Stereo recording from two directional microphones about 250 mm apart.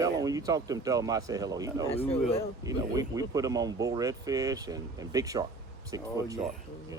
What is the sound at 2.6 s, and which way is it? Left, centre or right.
Speech, centre.